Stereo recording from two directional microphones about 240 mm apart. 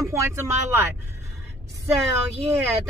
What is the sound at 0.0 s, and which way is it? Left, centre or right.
Speech, centre.